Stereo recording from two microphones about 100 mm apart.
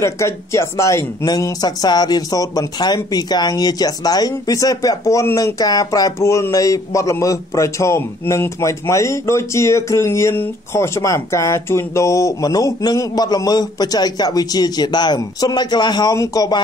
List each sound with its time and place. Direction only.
0.0 s speech: 30° left (ahead or behind)